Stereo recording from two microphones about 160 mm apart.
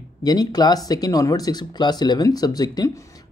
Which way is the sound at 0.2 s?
25° left (ahead or behind).